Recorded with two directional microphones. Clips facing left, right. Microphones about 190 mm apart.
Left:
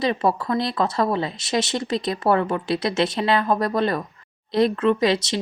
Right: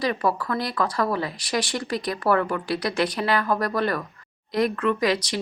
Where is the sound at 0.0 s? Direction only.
25° left (ahead or behind).